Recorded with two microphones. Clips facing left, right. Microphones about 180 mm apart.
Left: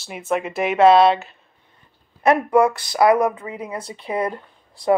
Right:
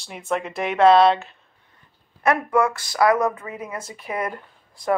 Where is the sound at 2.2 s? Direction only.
30° left (ahead or behind).